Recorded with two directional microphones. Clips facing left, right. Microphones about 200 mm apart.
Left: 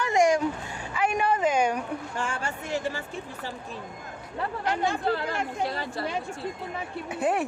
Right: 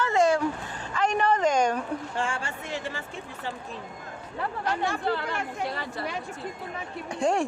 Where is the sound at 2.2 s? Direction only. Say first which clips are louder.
Even; 45° left (ahead or behind).